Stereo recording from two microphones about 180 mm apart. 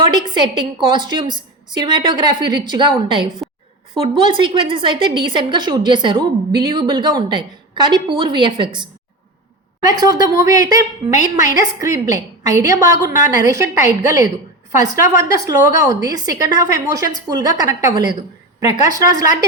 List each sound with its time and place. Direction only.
0.0 s a woman's voice: 25° right (ahead or behind)
14.7 s a woman's voice: 15° right (ahead or behind)